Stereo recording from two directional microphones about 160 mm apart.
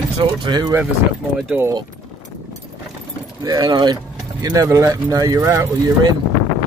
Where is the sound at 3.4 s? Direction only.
25° right (ahead or behind).